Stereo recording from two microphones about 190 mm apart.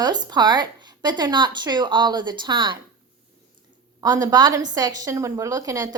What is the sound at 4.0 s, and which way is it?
A woman's voice, 20° right (ahead or behind).